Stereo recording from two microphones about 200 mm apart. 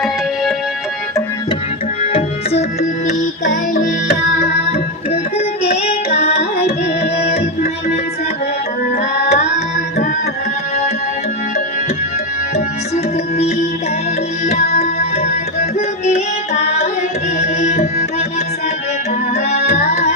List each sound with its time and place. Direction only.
2.0 s tabla: 30° left (ahead or behind)
3.1 s music: 40° left (ahead or behind)
5.7 s music: 30° left (ahead or behind)
9.2 s tabla: 35° left (ahead or behind)
14.4 s music: 35° left (ahead or behind)
19.5 s music: 35° left (ahead or behind)